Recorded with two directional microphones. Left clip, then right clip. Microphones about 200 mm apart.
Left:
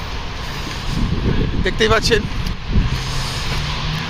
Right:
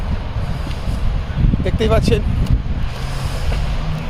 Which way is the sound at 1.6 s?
Centre (ahead or behind).